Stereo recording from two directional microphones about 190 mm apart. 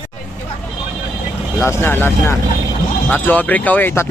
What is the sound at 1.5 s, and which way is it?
Speech, 10° left (ahead or behind).